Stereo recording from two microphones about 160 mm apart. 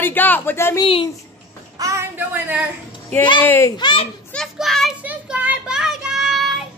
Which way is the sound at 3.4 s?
15° left (ahead or behind).